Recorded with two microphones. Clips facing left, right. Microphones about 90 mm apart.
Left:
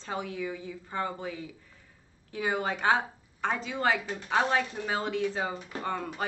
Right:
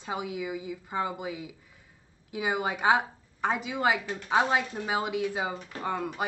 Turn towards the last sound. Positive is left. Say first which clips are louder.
# right 1 dB
turn(degrees=-10)  # may be behind; listen again after turning